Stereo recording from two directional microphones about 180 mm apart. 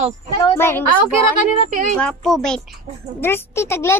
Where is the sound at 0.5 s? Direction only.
15° left (ahead or behind).